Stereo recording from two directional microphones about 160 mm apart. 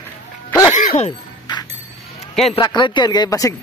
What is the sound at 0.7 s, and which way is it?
Music, 50° left (ahead or behind).